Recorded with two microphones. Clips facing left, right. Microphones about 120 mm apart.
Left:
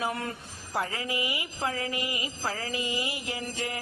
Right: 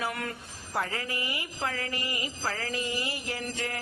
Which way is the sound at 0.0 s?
25° left (ahead or behind).